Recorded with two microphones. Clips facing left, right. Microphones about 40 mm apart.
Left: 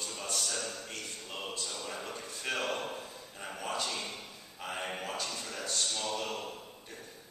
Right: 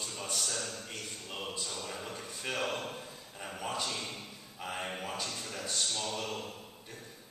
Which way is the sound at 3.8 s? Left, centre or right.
Centre.